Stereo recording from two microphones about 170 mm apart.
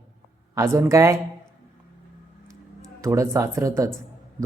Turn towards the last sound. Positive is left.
turn(degrees=-20)  # may be behind; listen again after turning